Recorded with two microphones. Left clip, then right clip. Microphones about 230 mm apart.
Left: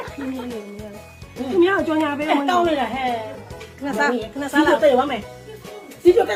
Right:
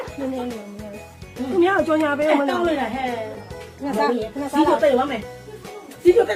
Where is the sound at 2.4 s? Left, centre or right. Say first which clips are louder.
Left 2 dB; left.